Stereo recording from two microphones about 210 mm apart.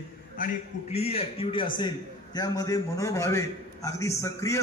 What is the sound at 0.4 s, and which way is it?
A man's voice, 30° left (ahead or behind).